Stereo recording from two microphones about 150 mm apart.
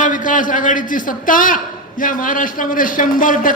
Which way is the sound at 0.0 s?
60° left (ahead or behind).